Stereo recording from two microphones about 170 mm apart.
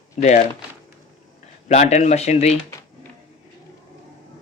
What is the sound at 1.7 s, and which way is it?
Speech, 40° left (ahead or behind).